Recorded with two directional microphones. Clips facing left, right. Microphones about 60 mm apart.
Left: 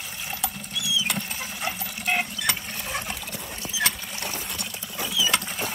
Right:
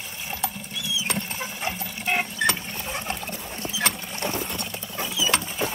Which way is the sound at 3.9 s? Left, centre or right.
Centre.